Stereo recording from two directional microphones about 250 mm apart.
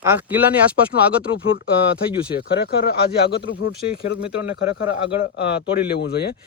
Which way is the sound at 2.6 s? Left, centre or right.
Left.